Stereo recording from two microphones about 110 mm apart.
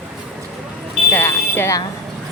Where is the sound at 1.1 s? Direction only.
20° left (ahead or behind).